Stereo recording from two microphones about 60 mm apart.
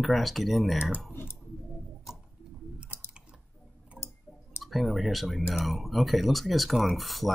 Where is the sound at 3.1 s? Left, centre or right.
Centre.